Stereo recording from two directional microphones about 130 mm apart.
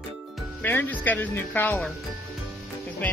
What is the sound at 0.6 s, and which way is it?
Speech, 15° left (ahead or behind).